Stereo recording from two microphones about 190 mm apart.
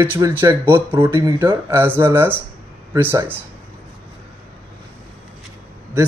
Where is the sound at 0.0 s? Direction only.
10° right (ahead or behind).